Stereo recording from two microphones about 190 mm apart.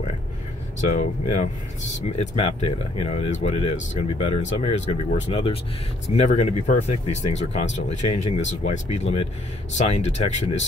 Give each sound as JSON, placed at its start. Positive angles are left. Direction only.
{"t": 0.7, "sound": "speech", "side_deg": 40}